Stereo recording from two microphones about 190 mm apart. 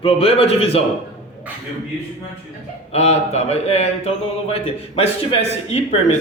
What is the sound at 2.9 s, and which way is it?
Speech, 35° left (ahead or behind).